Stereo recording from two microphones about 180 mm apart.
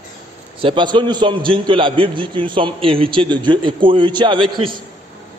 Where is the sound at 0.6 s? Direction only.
25° right (ahead or behind).